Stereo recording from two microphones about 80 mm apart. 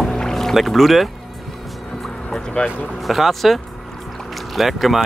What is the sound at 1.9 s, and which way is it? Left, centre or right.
Music, centre.